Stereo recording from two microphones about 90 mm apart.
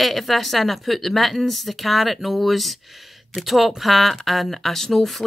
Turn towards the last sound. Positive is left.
turn(degrees=0)  # may be behind; listen again after turning